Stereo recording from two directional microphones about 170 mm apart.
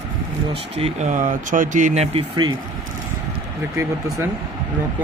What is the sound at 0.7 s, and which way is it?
Speech, 40° right (ahead or behind).